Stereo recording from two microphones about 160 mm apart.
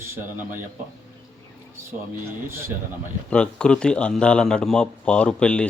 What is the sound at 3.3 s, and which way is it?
Speech, 5° left (ahead or behind).